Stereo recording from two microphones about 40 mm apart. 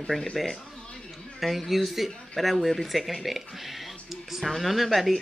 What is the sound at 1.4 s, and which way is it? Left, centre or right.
Speech, centre.